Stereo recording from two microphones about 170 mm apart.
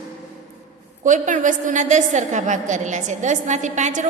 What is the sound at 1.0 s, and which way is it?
A woman's voice, 45° right (ahead or behind).